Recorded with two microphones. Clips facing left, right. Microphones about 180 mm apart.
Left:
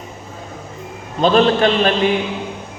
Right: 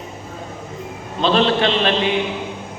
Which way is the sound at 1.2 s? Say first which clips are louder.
Left 3 dB; 45° left (ahead or behind).